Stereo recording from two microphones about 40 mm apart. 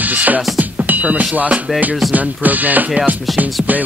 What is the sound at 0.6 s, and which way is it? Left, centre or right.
Speech, right.